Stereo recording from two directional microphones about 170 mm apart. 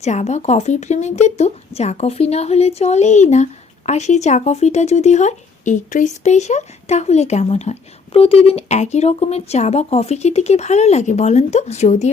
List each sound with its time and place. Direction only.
0.0 s speech: 40° left (ahead or behind)